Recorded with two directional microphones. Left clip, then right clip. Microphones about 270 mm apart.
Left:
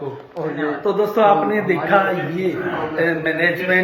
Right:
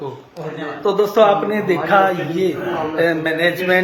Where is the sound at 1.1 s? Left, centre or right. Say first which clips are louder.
Even; centre.